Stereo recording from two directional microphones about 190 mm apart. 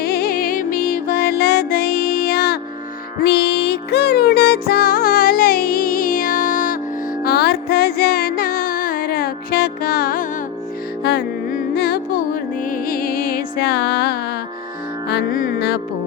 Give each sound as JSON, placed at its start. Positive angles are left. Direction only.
{"t": 0.0, "sound": "music", "side_deg": 55}
{"t": 15.1, "sound": "music", "side_deg": 45}